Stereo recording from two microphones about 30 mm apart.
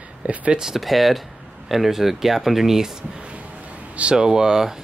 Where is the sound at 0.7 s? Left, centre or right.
Centre.